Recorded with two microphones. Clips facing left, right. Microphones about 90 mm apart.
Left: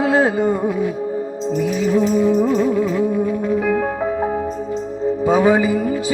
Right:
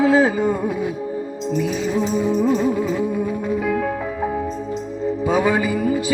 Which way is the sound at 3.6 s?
40° left (ahead or behind).